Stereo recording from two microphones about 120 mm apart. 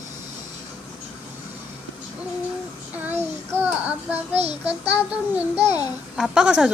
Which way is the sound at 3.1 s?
15° right (ahead or behind).